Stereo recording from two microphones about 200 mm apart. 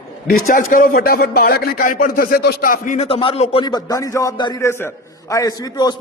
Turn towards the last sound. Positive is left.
turn(degrees=20)  # may be behind; listen again after turning